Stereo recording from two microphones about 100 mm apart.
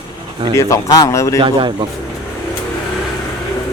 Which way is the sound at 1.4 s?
55° right (ahead or behind).